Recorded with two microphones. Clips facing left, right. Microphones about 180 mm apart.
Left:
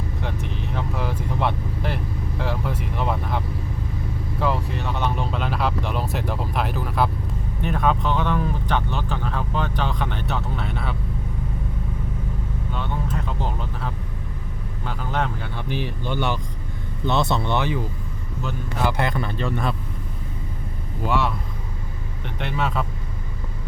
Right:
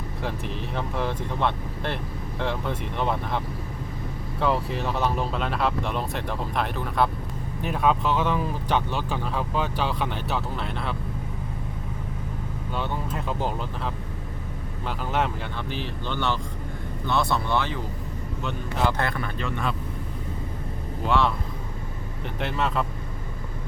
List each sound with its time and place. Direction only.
0.2 s speech: centre (ahead or behind)
14.8 s speech: 5° right (ahead or behind)
15.7 s speech: 15° left (ahead or behind)
19.4 s speech: 40° left (ahead or behind)
21.1 s speech: 5° left (ahead or behind)
22.4 s speech: centre (ahead or behind)